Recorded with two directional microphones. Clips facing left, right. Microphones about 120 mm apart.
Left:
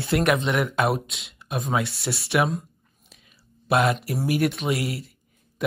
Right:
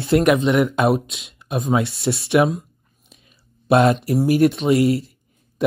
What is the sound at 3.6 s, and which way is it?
Speech, 25° right (ahead or behind).